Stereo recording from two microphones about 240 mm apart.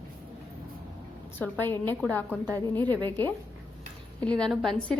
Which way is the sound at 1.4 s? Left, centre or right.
Centre.